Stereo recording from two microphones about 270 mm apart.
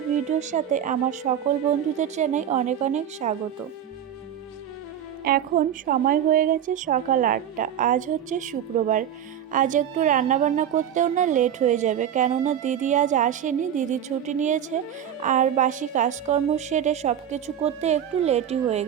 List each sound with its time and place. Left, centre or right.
0.3 s speech: right
5.2 s speech: right